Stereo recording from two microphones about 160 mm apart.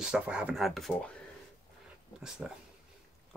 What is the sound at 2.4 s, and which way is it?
Speech, 5° right (ahead or behind).